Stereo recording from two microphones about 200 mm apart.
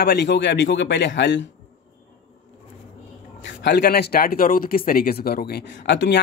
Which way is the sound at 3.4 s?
55° left (ahead or behind).